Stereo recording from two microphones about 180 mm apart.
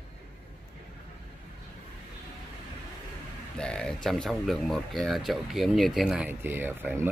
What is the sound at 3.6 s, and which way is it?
Speech, 5° left (ahead or behind).